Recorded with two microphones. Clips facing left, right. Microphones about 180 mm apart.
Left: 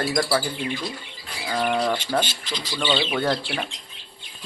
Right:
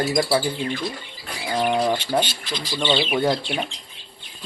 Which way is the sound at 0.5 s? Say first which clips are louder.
Right 2 dB; 15° left (ahead or behind).